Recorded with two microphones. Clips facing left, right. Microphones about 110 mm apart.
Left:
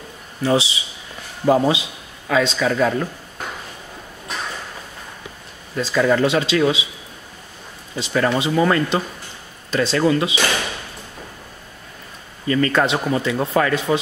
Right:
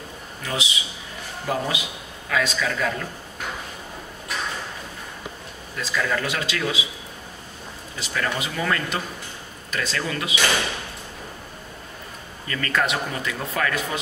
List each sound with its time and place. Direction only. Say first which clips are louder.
0.4 s a man's voice: left 10 dB; 30° left (ahead or behind)
5.8 s speech: left 9 dB; 30° left (ahead or behind)
8.0 s speech: left 8 dB; 30° left (ahead or behind)
12.4 s speech: left 7 dB; 25° left (ahead or behind)